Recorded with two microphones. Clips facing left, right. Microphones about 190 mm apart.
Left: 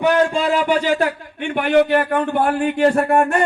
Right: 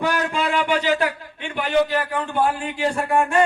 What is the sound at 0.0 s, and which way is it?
A man's voice, 25° left (ahead or behind).